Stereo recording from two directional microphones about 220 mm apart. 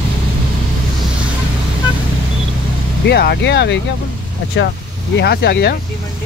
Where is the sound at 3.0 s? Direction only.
50° left (ahead or behind).